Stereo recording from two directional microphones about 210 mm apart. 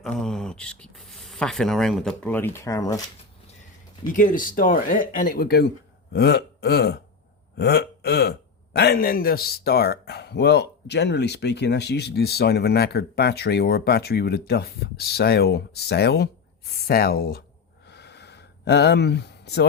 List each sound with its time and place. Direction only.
0.0 s speech: centre (ahead or behind)
4.1 s a man's voice: 40° left (ahead or behind)
17.8 s a sound: 50° left (ahead or behind)